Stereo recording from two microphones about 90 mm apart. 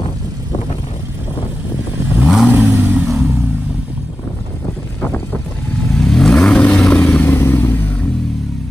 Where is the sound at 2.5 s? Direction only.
20° right (ahead or behind).